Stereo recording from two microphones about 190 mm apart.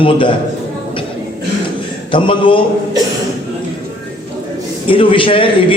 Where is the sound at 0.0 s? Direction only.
25° left (ahead or behind).